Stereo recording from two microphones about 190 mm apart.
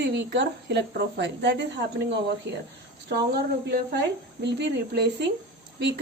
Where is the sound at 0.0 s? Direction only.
65° right (ahead or behind).